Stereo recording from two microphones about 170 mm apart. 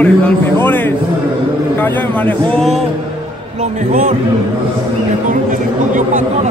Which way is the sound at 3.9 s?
50° right (ahead or behind).